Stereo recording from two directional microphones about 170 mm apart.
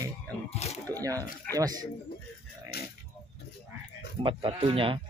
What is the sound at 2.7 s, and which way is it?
Pig, 70° left (ahead or behind).